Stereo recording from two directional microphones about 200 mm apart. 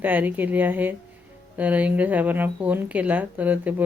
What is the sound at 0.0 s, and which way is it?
Speech, 10° right (ahead or behind).